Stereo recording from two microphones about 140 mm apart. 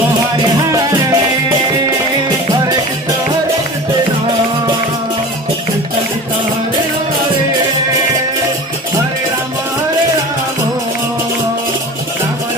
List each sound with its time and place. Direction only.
0.7 s music: 25° right (ahead or behind)